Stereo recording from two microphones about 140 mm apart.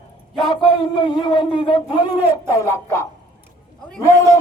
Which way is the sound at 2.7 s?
20° left (ahead or behind).